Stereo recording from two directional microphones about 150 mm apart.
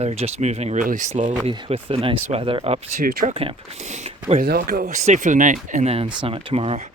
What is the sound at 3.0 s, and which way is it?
Speech, 75° right (ahead or behind).